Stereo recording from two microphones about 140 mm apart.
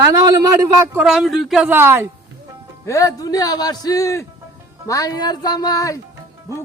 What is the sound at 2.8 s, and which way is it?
A man's voice, 25° left (ahead or behind).